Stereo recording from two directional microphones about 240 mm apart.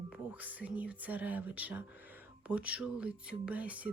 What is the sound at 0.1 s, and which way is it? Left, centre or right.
Speech, centre.